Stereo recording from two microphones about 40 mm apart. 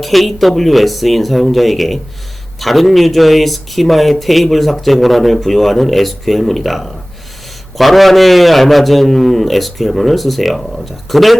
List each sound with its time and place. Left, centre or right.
0.0 s a man's voice: centre